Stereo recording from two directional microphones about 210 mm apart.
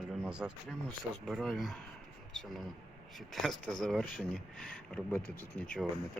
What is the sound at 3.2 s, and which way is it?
Speech, centre (ahead or behind).